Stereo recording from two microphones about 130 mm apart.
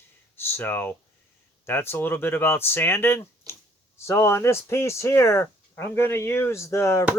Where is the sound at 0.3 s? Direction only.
15° left (ahead or behind).